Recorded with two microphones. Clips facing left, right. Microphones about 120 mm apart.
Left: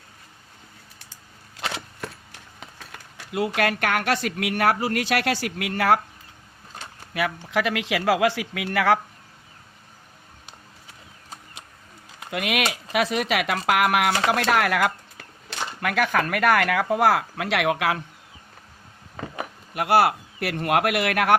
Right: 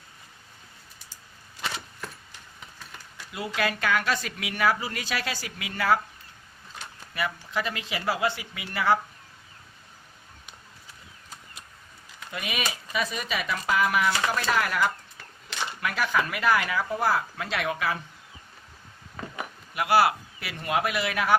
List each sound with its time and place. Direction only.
1.5 s a sound: 90° left; by 2.8 s 70° left (ahead or behind)
3.3 s a woman's voice: 65° left (ahead or behind)
7.1 s speech: 70° left (ahead or behind); by 9.0 s 90° left
12.2 s speech: 75° left (ahead or behind)
15.8 s a woman's voice: 55° left (ahead or behind); by 18.0 s 75° left (ahead or behind)
19.7 s a woman's voice: 50° left (ahead or behind)